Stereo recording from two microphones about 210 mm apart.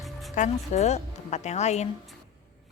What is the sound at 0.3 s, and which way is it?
Speech, 35° left (ahead or behind).